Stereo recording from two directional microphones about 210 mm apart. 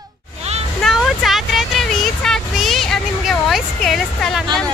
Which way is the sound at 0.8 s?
Centre (ahead or behind).